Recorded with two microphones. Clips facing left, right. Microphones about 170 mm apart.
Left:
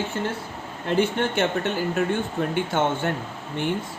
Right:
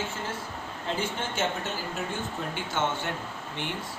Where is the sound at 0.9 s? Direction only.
60° left (ahead or behind).